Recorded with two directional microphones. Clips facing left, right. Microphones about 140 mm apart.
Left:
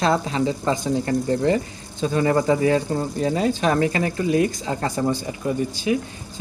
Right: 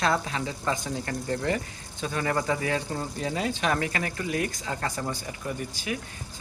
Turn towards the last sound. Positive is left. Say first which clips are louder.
# left 10 dB
turn(degrees=25)  # may be behind; listen again after turning